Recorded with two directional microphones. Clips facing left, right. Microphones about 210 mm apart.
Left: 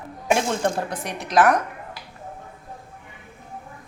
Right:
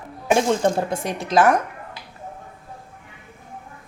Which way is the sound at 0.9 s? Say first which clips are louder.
Right 2 dB; 25° right (ahead or behind).